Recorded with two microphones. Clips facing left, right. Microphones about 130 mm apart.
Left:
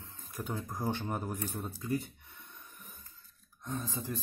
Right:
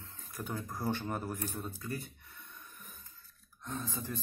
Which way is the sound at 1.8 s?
15° left (ahead or behind).